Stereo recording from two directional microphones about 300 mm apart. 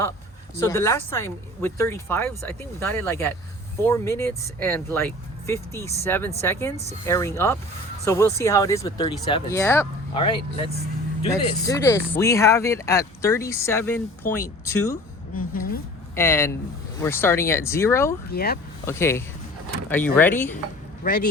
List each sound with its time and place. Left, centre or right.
0.6 s speech: centre
16.1 s speech: centre
18.3 s speech: left
18.9 s speech: centre
21.0 s speech: left